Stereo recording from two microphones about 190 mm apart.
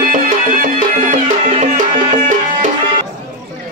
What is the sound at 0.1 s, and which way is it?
Music, 45° right (ahead or behind).